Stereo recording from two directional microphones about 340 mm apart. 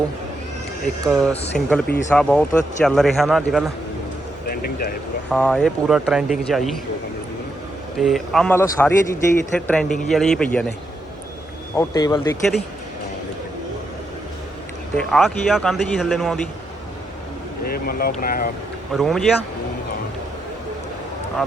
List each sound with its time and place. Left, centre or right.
1.0 s speech: centre
5.3 s speech: centre
7.9 s speech: centre
11.7 s speech: centre
14.9 s speech: centre
17.7 s speech: left
18.9 s speech: centre